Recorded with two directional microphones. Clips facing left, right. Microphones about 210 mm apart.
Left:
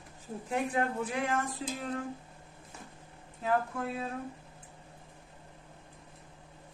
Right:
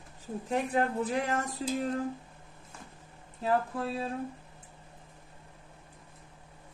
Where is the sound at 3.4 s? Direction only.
30° right (ahead or behind).